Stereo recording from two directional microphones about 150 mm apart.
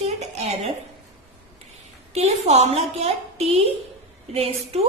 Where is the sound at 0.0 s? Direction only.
45° right (ahead or behind).